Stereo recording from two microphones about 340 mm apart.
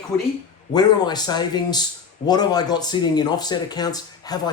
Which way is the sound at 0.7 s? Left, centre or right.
Centre.